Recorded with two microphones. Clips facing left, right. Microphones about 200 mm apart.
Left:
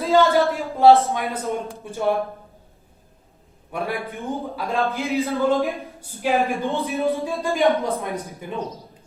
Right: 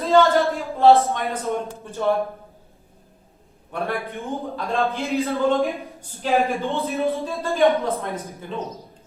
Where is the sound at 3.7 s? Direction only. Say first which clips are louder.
Even; 10° left (ahead or behind).